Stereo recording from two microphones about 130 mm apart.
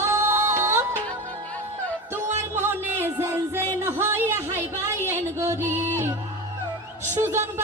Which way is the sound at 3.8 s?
20° right (ahead or behind).